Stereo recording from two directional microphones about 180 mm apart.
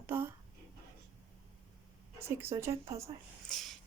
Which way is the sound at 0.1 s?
10° right (ahead or behind).